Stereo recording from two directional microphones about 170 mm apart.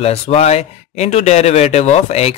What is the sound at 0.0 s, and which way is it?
Speech, 35° left (ahead or behind).